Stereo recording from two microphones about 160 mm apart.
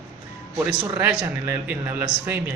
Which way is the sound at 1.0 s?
10° right (ahead or behind).